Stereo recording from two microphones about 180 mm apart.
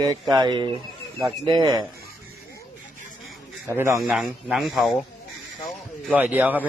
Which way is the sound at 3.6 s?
15° right (ahead or behind).